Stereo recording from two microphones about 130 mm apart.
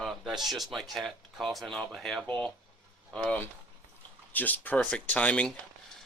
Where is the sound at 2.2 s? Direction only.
10° left (ahead or behind).